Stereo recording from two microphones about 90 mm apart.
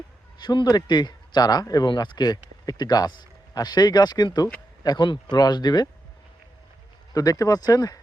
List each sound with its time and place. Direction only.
0.3 s speech: 55° left (ahead or behind)
7.1 s speech: 40° left (ahead or behind)